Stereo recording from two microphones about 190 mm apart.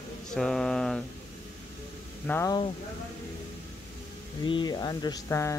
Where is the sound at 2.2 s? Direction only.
10° left (ahead or behind).